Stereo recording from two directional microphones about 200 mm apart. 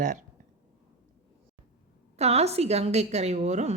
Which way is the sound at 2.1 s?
30° right (ahead or behind).